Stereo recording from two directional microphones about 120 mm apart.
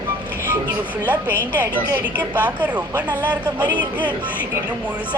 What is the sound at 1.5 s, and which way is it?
Speech, 15° right (ahead or behind).